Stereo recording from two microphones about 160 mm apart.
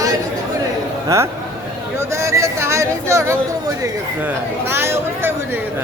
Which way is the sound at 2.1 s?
20° right (ahead or behind).